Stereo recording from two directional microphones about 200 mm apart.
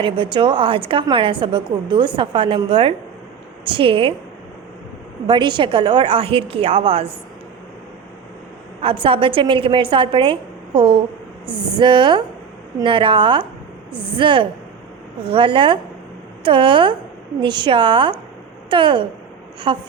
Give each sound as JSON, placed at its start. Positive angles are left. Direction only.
{"t": 0.0, "sound": "a woman's voice", "side_deg": -25}
{"t": 5.2, "sound": "a woman's voice", "side_deg": -25}
{"t": 8.8, "sound": "a woman's voice", "side_deg": -25}